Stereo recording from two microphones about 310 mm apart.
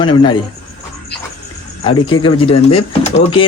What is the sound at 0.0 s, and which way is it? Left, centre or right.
Speech, centre.